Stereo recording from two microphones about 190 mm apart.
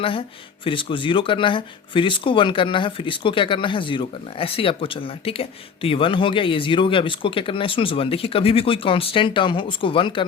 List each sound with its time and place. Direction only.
0.0 s speech: 30° left (ahead or behind)